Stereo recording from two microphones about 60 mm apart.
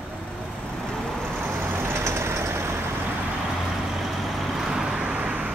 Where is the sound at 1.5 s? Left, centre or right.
Right.